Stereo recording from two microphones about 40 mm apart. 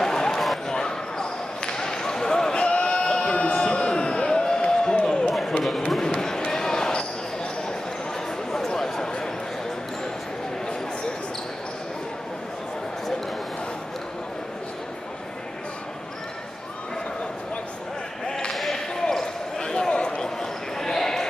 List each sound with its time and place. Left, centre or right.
0.0 s a sound: centre
0.7 s basketball bounce: centre
2.6 s a sound: left
5.9 s basketball bounce: centre
8.5 s a sound: centre
18.2 s basketball bounce: centre
18.5 s basketball bounce: centre
18.9 s basketball bounce: centre
20.7 s basketball bounce: centre